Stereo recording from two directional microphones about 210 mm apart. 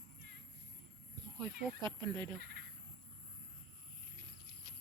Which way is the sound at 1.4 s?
20° right (ahead or behind).